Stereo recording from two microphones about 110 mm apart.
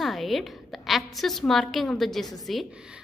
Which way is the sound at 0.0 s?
Centre (ahead or behind).